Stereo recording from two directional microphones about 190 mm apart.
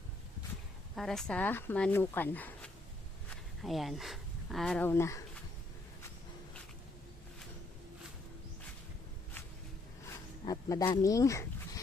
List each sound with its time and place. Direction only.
0.9 s speech: centre (ahead or behind)
10.4 s speech: 20° left (ahead or behind)